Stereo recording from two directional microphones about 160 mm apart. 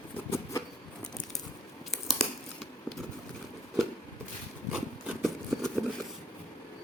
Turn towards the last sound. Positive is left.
turn(degrees=0)  # may be behind; listen again after turning